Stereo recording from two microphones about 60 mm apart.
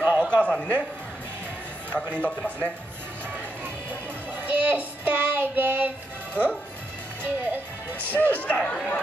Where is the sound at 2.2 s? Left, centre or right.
Left.